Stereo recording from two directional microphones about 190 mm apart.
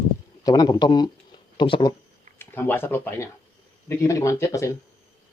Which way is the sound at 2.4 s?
10° left (ahead or behind).